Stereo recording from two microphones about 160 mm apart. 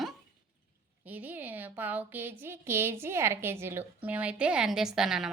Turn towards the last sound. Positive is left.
turn(degrees=-5)  # may be behind; listen again after turning